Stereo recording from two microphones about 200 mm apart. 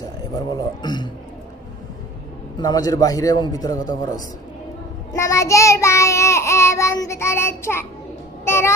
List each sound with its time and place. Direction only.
0.0 s a man's voice: 20° left (ahead or behind)
2.6 s a man's voice: 20° left (ahead or behind)
5.1 s child singing: 15° left (ahead or behind)